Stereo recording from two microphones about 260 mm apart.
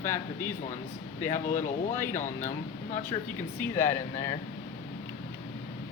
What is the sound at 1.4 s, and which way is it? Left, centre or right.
Speech, left.